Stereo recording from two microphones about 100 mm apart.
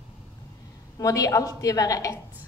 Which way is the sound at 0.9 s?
35° left (ahead or behind).